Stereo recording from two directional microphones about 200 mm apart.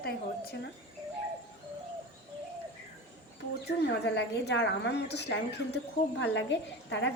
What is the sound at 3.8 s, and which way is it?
A woman's voice, 60° left (ahead or behind).